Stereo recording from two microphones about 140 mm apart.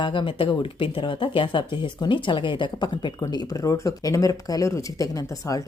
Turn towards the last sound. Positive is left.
turn(degrees=25)  # may be behind; listen again after turning